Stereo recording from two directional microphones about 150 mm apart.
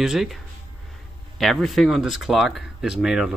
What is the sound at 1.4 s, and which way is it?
Speech, centre (ahead or behind).